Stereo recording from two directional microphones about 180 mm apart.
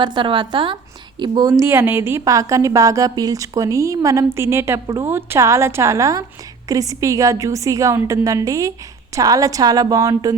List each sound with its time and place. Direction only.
0.0 s a woman's voice: 25° right (ahead or behind)